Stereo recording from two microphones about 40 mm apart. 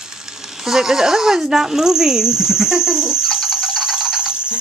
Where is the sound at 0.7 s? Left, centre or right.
Centre.